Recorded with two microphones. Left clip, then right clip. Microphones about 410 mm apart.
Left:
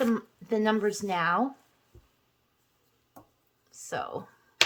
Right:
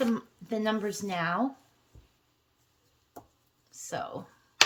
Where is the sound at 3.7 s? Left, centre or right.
Centre.